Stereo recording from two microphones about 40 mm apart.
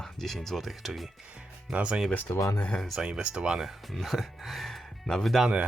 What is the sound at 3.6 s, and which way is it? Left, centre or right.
Speech, centre.